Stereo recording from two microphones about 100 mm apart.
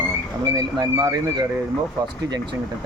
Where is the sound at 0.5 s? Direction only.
40° right (ahead or behind).